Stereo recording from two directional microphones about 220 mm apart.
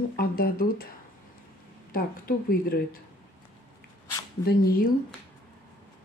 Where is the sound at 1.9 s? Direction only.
40° left (ahead or behind).